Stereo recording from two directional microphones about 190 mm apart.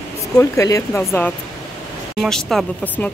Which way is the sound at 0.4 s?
15° left (ahead or behind).